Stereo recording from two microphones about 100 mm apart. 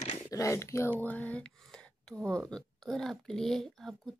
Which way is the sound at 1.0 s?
15° left (ahead or behind).